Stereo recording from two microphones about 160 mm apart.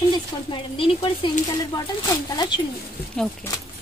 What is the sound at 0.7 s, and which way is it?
Speech, 35° left (ahead or behind).